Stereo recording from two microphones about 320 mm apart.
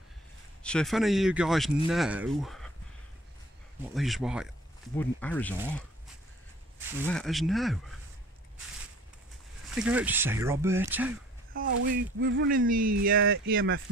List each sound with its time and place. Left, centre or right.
0.7 s speech: centre
3.9 s speech: centre
7.1 s speech: centre
9.8 s speech: centre
11.9 s speech: right